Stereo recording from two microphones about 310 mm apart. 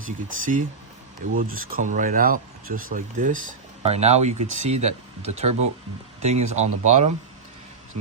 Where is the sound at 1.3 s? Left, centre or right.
Right.